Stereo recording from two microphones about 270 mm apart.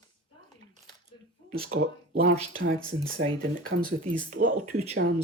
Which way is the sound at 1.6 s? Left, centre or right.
Right.